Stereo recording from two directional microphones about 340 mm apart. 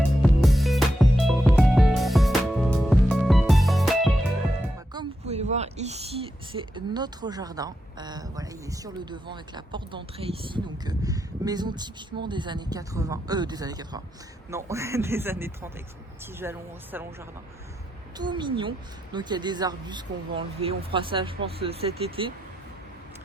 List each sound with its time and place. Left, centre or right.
0.2 s music: centre
4.9 s a sound: centre
6.5 s speech: centre
18.2 s speech: centre